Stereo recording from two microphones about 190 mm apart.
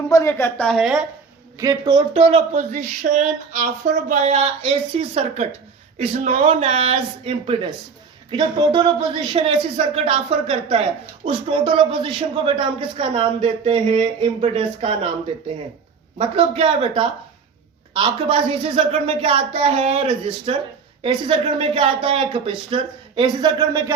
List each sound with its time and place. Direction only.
0.1 s a woman's voice: 15° left (ahead or behind); by 1.0 s centre (ahead or behind)
1.5 s speech: 20° right (ahead or behind)
16.1 s speech: 30° right (ahead or behind)